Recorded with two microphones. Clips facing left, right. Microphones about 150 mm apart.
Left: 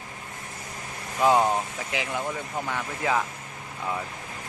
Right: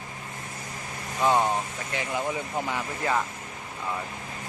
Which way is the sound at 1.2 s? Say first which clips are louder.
Left 2 dB; 10° left (ahead or behind).